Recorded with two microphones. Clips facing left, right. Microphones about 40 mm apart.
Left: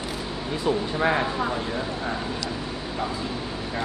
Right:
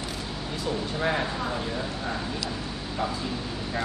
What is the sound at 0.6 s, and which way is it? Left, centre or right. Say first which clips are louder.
Speech: left 5 dB; centre.